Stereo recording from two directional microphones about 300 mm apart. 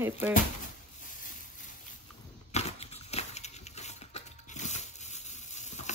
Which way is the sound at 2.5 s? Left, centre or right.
Left.